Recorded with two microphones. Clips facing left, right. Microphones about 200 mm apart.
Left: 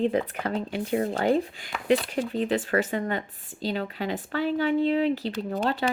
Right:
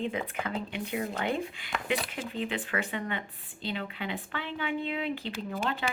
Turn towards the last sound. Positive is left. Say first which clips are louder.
# left 6 dB
turn(degrees=40)  # may be behind; listen again after turning